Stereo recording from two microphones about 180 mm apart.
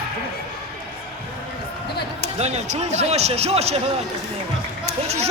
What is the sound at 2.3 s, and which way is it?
Speech, 35° right (ahead or behind).